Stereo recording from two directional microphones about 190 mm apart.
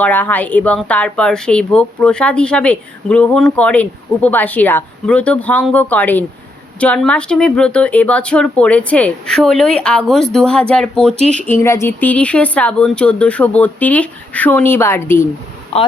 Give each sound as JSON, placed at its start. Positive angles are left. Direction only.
{"t": 0.0, "sound": "speech", "side_deg": 10}
{"t": 11.1, "sound": "speech", "side_deg": -35}
{"t": 11.3, "sound": "speech", "side_deg": 10}